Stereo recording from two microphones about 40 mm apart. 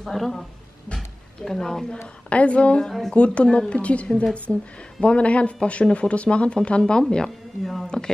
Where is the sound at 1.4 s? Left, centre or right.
Centre.